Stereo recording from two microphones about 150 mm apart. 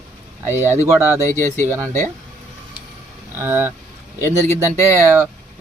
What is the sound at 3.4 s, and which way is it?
Speech, 15° right (ahead or behind).